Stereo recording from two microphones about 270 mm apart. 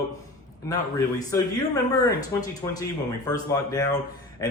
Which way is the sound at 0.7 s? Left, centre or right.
Centre.